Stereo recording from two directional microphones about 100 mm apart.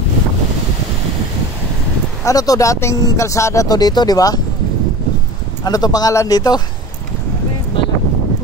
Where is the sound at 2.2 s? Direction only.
35° left (ahead or behind).